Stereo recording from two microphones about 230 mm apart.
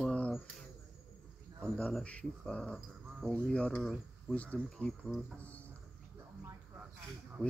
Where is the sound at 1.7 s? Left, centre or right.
Centre.